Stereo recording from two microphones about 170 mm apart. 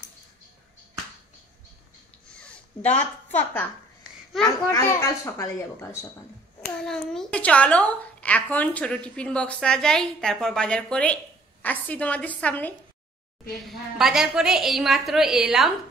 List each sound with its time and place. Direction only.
2.2 s a sound: 5° left (ahead or behind)
4.5 s a woman's voice: 20° left (ahead or behind)
6.6 s a woman's voice: 5° left (ahead or behind)
13.7 s a woman's voice: centre (ahead or behind)